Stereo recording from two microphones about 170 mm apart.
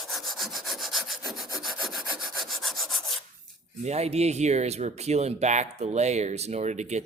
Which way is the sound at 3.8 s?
40° right (ahead or behind).